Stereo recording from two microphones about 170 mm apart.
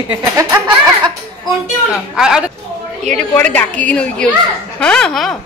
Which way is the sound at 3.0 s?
5° left (ahead or behind).